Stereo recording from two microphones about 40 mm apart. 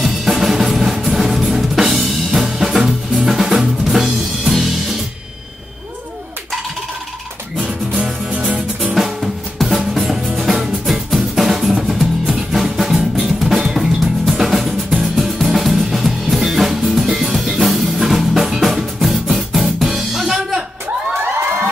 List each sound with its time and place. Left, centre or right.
0.0 s drum kit: centre
7.9 s music: right
8.9 s drum: centre
10.5 s music: centre
11.1 s drum: centre
13.7 s music: centre
21.2 s crowd: right